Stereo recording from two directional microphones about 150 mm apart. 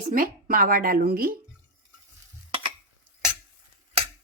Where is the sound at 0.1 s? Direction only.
65° right (ahead or behind); by 1.3 s 90° right.